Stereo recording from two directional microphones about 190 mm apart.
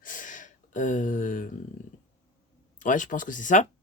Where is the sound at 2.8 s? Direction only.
45° left (ahead or behind).